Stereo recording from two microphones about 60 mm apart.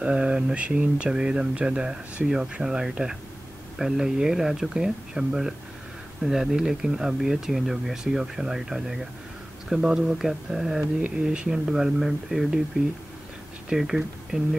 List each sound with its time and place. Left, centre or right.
0.0 s speech: centre
11.0 s speech: centre
13.7 s speech: centre